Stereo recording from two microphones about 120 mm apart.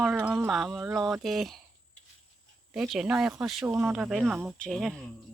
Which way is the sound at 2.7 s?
5° right (ahead or behind).